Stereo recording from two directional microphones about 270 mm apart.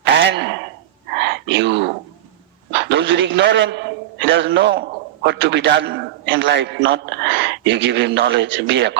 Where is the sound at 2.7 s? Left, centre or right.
Right.